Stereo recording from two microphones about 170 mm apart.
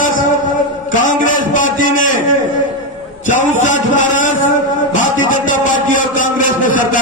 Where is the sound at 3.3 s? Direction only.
45° left (ahead or behind).